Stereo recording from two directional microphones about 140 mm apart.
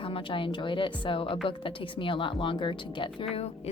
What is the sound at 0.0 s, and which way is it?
Speech, 40° left (ahead or behind).